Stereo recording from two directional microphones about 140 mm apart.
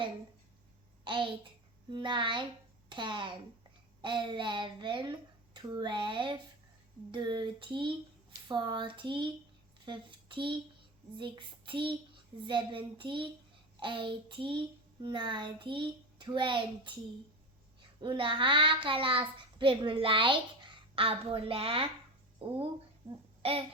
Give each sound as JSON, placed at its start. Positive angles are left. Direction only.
{"t": 1.0, "sound": "a child's voice", "side_deg": -35}
{"t": 18.0, "sound": "a child's voice", "side_deg": -35}